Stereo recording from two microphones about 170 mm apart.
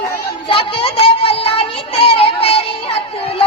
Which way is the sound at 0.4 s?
30° left (ahead or behind).